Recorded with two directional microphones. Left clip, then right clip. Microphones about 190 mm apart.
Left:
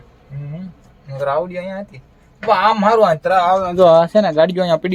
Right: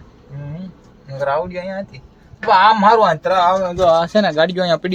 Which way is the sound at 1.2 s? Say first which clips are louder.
Even; 15° left (ahead or behind).